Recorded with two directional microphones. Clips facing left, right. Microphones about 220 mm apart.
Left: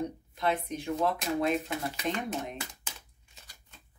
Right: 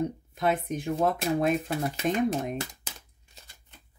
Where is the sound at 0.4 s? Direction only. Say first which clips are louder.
Right 3 dB; 50° right (ahead or behind).